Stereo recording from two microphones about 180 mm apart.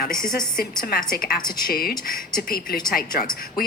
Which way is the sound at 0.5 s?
55° left (ahead or behind).